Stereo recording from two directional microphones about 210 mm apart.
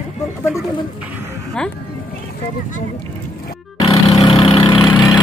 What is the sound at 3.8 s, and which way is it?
Vehicle, 25° left (ahead or behind).